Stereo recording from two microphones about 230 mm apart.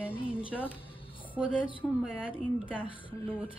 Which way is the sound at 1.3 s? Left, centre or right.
Centre.